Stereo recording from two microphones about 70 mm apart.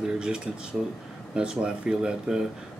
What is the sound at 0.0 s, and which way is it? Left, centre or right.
Speech, centre.